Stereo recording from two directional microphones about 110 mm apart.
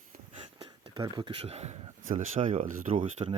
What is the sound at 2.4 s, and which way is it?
Speech, 65° right (ahead or behind).